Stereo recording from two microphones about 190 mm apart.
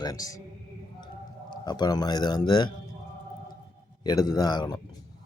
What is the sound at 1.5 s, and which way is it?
Speech, 20° left (ahead or behind).